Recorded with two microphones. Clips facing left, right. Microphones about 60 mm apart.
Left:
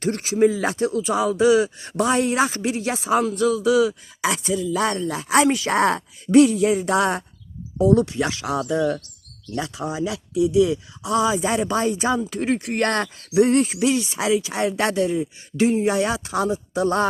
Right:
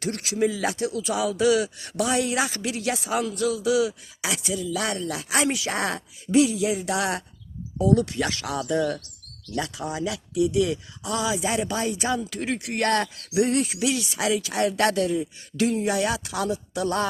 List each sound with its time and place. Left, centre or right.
0.0 s speech: left
7.8 s speech: left
11.1 s speech: left